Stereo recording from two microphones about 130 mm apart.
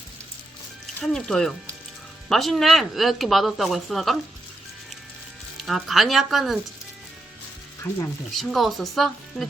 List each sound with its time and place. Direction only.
1.0 s speech: 5° left (ahead or behind)
5.5 s speech: centre (ahead or behind)
7.9 s speech: 20° left (ahead or behind)
8.3 s speech: centre (ahead or behind)